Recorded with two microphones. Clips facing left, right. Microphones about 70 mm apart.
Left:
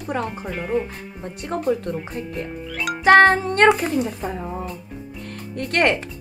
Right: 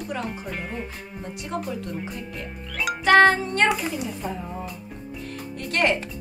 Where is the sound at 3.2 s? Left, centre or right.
Left.